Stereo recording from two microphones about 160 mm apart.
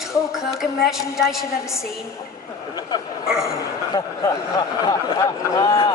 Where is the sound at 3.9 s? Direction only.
25° left (ahead or behind).